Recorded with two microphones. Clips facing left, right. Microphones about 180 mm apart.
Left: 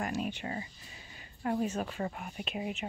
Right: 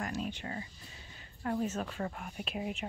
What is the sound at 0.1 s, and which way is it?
A woman's voice, 15° left (ahead or behind).